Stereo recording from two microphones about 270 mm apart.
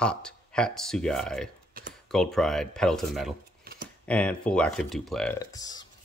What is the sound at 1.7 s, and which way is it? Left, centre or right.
Computer keyboard, right.